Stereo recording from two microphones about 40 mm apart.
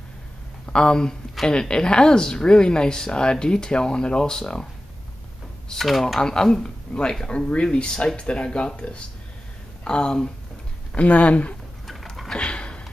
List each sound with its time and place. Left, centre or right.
0.7 s speech: centre
5.9 s speech: centre
6.2 s speech: centre
6.9 s speech: left
11.0 s speech: left
12.4 s a sound: left